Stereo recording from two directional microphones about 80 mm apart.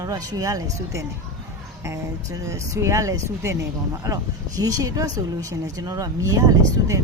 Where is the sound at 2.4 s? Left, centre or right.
Right.